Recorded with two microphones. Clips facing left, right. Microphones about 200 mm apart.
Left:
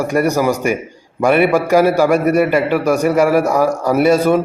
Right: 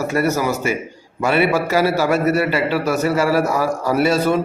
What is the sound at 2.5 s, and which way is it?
Speech, 50° left (ahead or behind).